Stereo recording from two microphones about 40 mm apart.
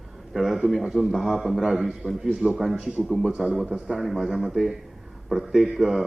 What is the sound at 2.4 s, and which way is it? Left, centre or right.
Speech, right.